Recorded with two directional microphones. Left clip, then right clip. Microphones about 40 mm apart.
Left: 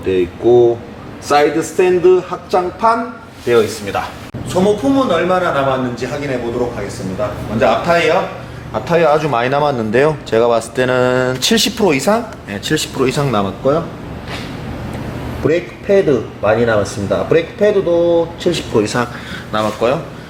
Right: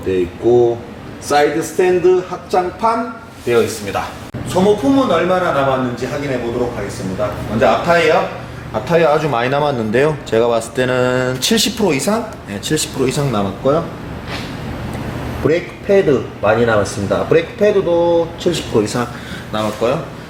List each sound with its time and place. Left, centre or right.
0.1 s speech: left
1.8 s a man's voice: left
13.2 s a man's voice: left
15.4 s a man's voice: centre